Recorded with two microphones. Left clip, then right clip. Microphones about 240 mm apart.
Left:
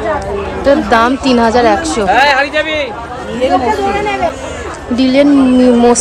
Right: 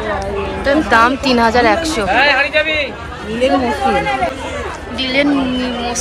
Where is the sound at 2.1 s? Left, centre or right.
Left.